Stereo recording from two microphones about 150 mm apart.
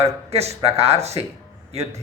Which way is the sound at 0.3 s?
45° right (ahead or behind).